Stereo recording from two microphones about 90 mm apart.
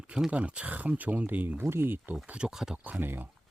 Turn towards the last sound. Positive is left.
turn(degrees=-20)  # may be behind; listen again after turning